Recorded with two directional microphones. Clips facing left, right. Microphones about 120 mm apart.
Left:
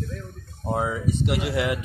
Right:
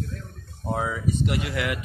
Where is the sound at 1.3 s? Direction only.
20° left (ahead or behind).